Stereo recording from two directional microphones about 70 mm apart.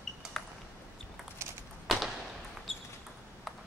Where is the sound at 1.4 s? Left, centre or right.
Right.